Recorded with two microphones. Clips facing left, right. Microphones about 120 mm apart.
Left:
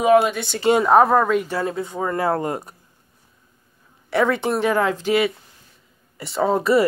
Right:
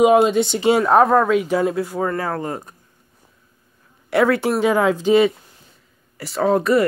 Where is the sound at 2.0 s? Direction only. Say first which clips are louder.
Left 1 dB; 15° left (ahead or behind).